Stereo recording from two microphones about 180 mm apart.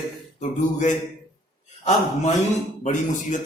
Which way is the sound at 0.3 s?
40° left (ahead or behind).